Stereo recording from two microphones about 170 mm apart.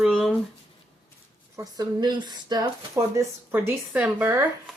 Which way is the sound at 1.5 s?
20° right (ahead or behind).